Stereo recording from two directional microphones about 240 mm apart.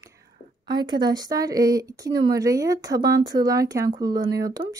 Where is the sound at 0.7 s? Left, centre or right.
Centre.